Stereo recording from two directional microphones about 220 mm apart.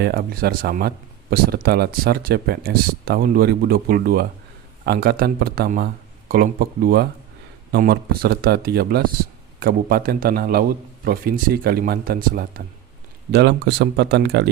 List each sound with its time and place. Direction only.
0.0 s speech: 40° right (ahead or behind)